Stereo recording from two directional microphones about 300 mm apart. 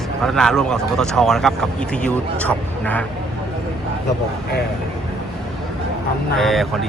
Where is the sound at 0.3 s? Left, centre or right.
Centre.